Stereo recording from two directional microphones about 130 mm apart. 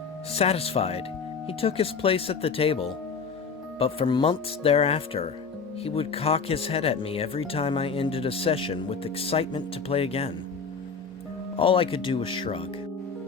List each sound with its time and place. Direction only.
0.3 s speech: 50° left (ahead or behind)
11.6 s speech: 45° left (ahead or behind)